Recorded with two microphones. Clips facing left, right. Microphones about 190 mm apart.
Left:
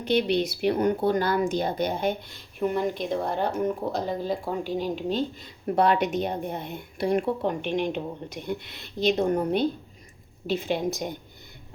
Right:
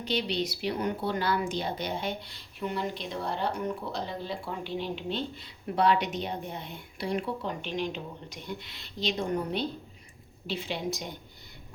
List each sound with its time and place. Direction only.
0.0 s speech: 55° left (ahead or behind)